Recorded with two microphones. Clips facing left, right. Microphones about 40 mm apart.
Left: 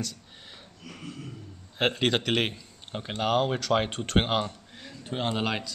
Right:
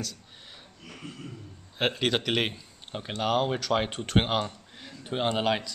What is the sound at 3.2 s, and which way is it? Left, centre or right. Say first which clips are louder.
Speech: left 1 dB; centre.